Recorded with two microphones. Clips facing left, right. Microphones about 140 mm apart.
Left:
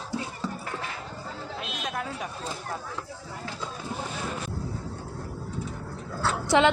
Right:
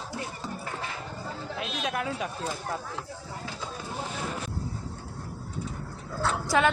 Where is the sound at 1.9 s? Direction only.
70° right (ahead or behind).